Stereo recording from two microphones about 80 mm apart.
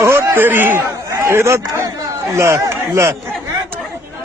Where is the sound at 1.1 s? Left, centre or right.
Right.